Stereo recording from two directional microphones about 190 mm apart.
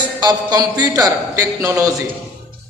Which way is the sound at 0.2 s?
20° right (ahead or behind).